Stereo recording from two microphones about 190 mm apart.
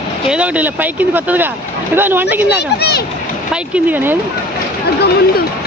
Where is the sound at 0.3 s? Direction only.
5° right (ahead or behind).